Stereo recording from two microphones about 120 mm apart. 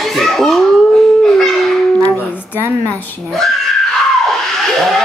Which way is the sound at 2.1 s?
20° left (ahead or behind).